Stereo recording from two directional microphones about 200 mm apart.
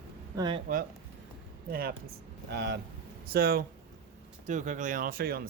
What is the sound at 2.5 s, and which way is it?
Speech, 55° right (ahead or behind).